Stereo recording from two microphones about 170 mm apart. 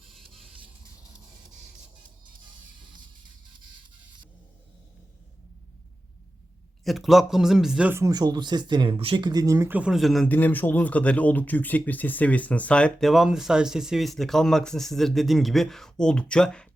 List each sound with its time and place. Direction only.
6.8 s a man's voice: centre (ahead or behind)